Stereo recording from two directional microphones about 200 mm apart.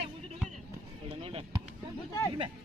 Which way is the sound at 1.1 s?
30° right (ahead or behind).